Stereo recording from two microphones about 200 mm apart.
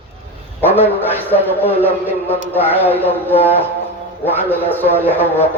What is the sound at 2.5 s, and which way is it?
A man's voice, 10° left (ahead or behind).